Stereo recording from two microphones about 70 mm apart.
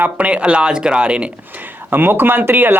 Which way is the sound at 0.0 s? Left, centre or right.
Centre.